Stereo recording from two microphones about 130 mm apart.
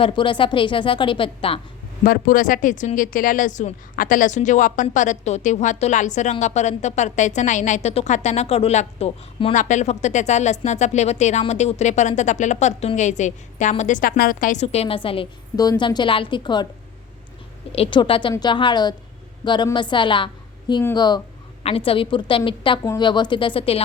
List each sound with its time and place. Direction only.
0.0 s a woman's voice: 40° left (ahead or behind)
2.0 s a woman's voice: 90° left; by 15.3 s 45° left (ahead or behind)
15.5 s a woman's voice: 30° left (ahead or behind)
17.7 s a woman's voice: 45° left (ahead or behind)
21.6 s a woman's voice: 45° left (ahead or behind)